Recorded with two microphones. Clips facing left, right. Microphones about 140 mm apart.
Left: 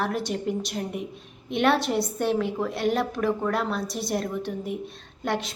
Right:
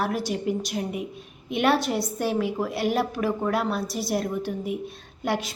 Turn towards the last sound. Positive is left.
turn(degrees=-5)  # may be behind; listen again after turning